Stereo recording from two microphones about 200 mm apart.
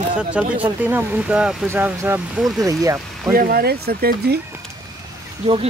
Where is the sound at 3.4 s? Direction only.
50° right (ahead or behind).